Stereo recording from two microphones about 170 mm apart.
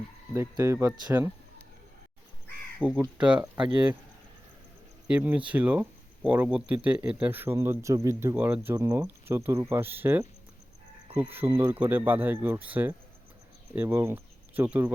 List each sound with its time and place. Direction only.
0.3 s speech: 15° right (ahead or behind)
2.8 s speech: 10° right (ahead or behind)
5.0 s speech: 10° right (ahead or behind)
11.3 s speech: 15° right (ahead or behind)